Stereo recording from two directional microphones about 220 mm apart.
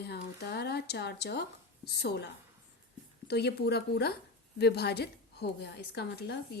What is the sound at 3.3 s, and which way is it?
A woman's voice, 50° left (ahead or behind).